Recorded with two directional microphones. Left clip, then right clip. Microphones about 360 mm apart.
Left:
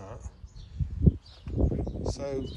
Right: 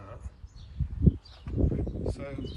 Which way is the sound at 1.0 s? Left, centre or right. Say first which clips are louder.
Even; centre.